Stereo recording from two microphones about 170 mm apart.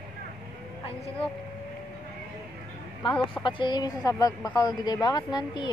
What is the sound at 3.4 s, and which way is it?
A woman's voice, 30° left (ahead or behind).